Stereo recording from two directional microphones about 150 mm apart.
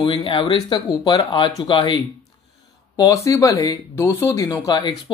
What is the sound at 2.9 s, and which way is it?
Speech, 20° left (ahead or behind).